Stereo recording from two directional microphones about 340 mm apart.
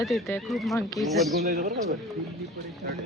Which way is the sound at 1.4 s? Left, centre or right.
Right.